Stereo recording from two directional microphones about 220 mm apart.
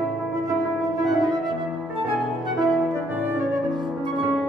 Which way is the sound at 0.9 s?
15° right (ahead or behind).